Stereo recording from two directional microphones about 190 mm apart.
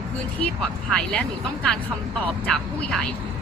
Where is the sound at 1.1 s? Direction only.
5° left (ahead or behind).